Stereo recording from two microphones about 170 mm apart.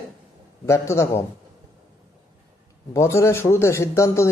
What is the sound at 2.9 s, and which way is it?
A man's voice, 15° left (ahead or behind).